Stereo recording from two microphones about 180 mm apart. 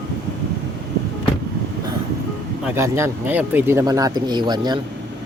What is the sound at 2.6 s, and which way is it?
Speech, 15° right (ahead or behind).